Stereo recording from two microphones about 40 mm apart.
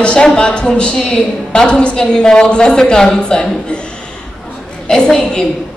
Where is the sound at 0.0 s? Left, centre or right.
Left.